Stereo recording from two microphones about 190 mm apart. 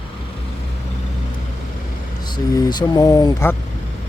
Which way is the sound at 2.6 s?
20° left (ahead or behind).